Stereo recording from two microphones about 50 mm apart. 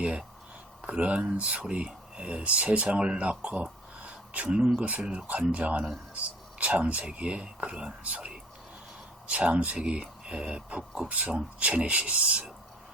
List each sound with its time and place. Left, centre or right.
0.0 s speech: right